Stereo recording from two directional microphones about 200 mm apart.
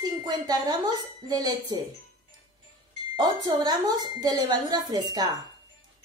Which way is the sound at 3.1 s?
20° right (ahead or behind).